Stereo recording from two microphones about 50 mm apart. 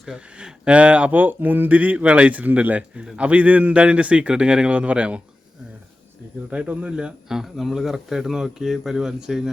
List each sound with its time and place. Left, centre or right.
0.1 s speech: centre
6.5 s speech: right
7.3 s speech: centre